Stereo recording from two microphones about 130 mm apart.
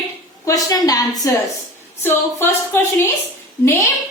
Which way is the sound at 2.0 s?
15° left (ahead or behind).